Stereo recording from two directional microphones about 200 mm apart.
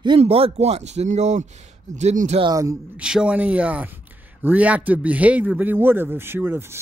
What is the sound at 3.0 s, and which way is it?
A man's voice, 5° right (ahead or behind).